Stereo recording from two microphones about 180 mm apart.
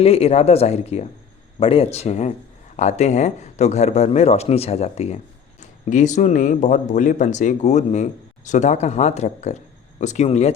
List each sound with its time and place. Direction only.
0.0 s speech: 35° left (ahead or behind)